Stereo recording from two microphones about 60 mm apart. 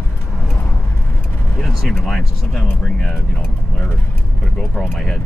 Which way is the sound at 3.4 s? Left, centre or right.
Left.